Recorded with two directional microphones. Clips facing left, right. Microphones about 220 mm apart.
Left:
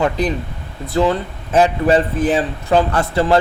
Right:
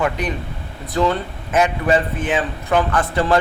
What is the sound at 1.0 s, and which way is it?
Speech, 30° left (ahead or behind).